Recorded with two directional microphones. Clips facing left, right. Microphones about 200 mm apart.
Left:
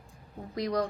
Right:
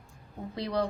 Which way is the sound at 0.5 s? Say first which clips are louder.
Left 1 dB; 30° right (ahead or behind).